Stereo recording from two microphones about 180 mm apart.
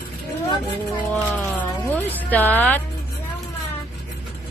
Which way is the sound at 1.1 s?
10° left (ahead or behind).